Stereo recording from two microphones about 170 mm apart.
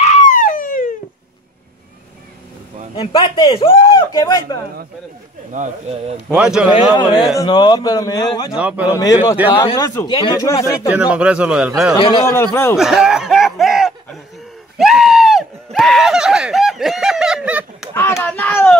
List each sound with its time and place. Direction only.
0.0 s a sound: 45° left (ahead or behind)
3.0 s speech: 25° left (ahead or behind)
5.5 s speech: 40° right (ahead or behind)
6.2 s speech: 5° right (ahead or behind)
7.0 s speech: 25° left (ahead or behind)
8.5 s speech: 10° right (ahead or behind)
8.9 s speech: 20° left (ahead or behind)
10.9 s a man's voice: 10° right (ahead or behind)
12.0 s speech: 30° left (ahead or behind)
12.7 s snicker: 5° right (ahead or behind)
14.8 s a sound: centre (ahead or behind)
17.9 s a sound: 15° left (ahead or behind)